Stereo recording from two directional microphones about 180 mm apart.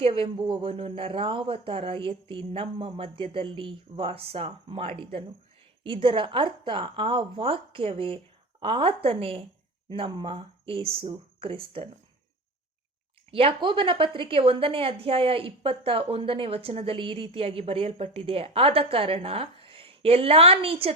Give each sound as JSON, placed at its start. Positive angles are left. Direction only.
{"t": 0.0, "sound": "a woman's voice", "side_deg": -30}
{"t": 13.3, "sound": "a woman's voice", "side_deg": -30}